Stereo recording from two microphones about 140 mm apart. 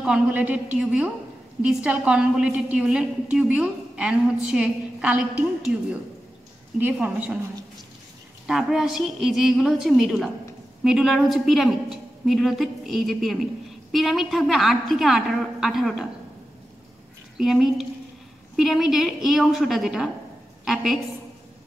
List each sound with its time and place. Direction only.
0.0 s a woman's voice: 10° right (ahead or behind)
6.8 s a woman's voice: 10° right (ahead or behind)
8.5 s a woman's voice: 5° right (ahead or behind)
17.4 s a woman's voice: centre (ahead or behind)